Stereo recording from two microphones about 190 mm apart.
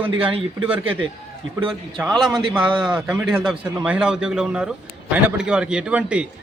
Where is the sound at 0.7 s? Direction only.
5° right (ahead or behind).